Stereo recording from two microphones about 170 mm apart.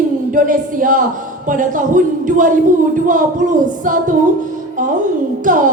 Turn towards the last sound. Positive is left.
turn(degrees=-50)  # may be behind; listen again after turning